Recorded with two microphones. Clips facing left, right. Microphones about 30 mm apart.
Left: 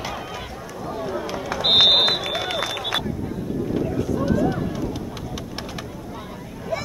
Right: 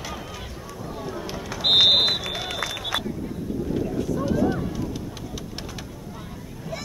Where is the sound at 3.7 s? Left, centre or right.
Centre.